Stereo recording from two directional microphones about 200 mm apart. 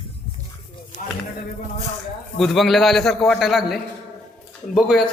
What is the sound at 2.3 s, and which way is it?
A man's voice, centre (ahead or behind).